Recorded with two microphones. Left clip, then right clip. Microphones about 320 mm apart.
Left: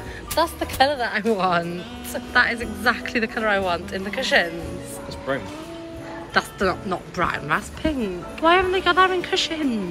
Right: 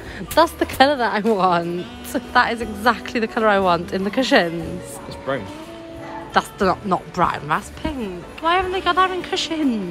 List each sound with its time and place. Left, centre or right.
0.4 s speech: centre
5.3 s speech: right
6.3 s speech: centre